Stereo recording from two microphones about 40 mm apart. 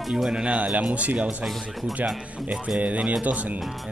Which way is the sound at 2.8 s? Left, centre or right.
Right.